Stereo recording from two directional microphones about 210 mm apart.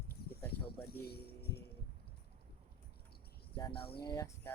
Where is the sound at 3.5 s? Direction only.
25° left (ahead or behind).